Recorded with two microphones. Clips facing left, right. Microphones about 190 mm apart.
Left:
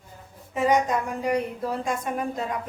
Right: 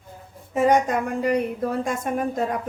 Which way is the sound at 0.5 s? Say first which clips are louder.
Right 3 dB; 55° right (ahead or behind).